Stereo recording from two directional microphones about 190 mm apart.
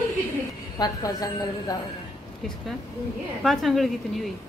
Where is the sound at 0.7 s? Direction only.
20° left (ahead or behind).